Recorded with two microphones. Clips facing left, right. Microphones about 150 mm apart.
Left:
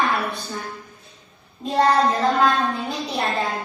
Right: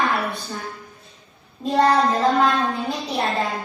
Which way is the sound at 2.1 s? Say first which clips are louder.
Right 2 dB; 25° right (ahead or behind).